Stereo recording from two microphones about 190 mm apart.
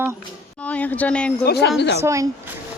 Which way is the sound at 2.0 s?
15° right (ahead or behind).